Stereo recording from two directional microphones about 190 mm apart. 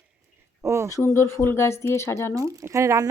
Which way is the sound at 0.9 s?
15° left (ahead or behind).